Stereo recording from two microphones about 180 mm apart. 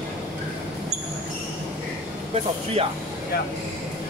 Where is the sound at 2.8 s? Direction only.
35° right (ahead or behind).